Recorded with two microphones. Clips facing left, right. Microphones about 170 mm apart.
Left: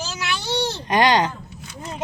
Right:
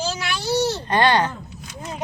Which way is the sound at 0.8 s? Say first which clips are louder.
Left 4 dB; 15° left (ahead or behind).